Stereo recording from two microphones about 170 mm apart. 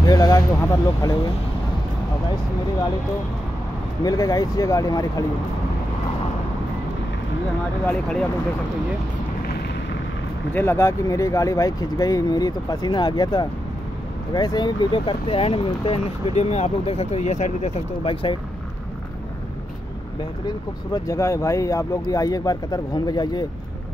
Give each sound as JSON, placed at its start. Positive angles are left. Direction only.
{"t": 0.0, "sound": "speech", "side_deg": 25}
{"t": 4.0, "sound": "speech", "side_deg": 20}
{"t": 7.8, "sound": "speech", "side_deg": 5}
{"t": 10.5, "sound": "speech", "side_deg": 15}
{"t": 20.9, "sound": "speech", "side_deg": 20}